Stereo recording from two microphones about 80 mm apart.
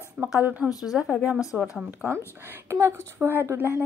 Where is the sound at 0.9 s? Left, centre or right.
Centre.